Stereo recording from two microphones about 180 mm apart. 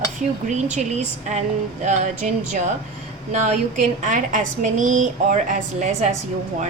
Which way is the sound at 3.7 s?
45° right (ahead or behind).